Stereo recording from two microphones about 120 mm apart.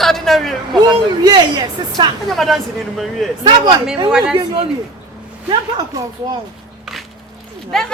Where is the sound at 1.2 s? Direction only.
35° right (ahead or behind).